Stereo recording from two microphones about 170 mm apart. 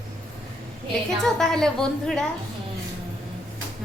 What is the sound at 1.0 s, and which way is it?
Speech, centre (ahead or behind).